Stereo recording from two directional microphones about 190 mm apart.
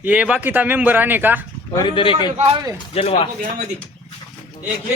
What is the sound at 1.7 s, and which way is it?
Speech, 20° left (ahead or behind).